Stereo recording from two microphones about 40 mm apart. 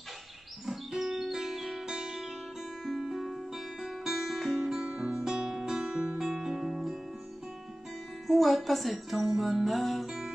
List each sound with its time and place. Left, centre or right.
0.7 s music: centre
2.0 s music: centre
2.8 s music: centre
8.3 s music: centre